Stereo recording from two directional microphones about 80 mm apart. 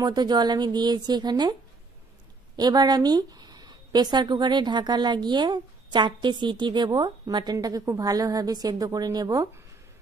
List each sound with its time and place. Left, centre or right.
0.0 s a woman's voice: right
7.5 s a woman's voice: right